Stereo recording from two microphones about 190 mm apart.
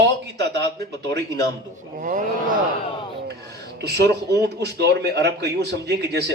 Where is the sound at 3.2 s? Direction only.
60° right (ahead or behind).